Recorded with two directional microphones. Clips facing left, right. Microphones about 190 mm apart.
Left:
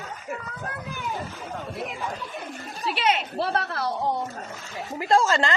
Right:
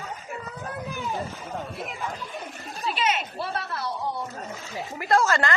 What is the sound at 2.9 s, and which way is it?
Speech, 65° left (ahead or behind).